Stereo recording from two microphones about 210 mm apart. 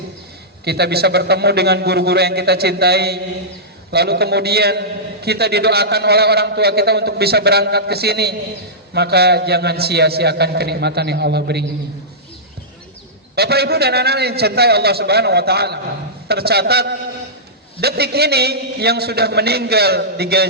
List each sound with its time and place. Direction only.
0.6 s a man's voice: 50° right (ahead or behind)
13.3 s a man's voice: 50° right (ahead or behind)